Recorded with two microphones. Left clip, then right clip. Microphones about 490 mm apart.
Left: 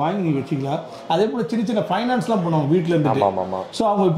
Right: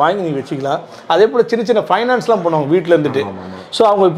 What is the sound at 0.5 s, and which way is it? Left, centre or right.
Speech, right.